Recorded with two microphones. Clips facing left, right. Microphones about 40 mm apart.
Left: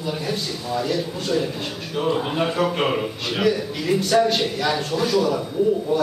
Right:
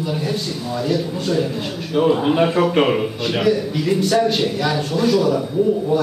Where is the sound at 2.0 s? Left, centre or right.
Centre.